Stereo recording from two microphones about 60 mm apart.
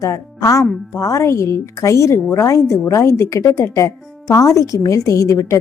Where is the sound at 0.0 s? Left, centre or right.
Left.